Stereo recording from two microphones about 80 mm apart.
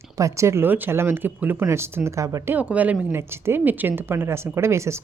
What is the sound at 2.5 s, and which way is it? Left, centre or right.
Speech, centre.